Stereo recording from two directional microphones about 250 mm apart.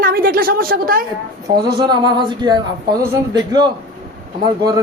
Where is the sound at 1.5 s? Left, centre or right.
Centre.